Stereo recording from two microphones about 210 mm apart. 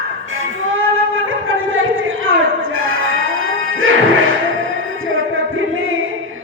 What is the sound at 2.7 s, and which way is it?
Music, 70° right (ahead or behind).